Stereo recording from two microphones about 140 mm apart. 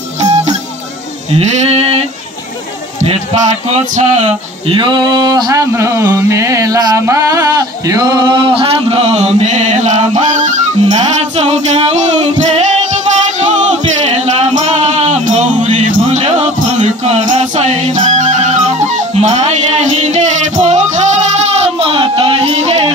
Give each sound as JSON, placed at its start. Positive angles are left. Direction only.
{"t": 1.3, "sound": "sheep", "side_deg": -50}
{"t": 3.6, "sound": "male singing", "side_deg": -55}
{"t": 4.6, "sound": "a sound", "side_deg": -35}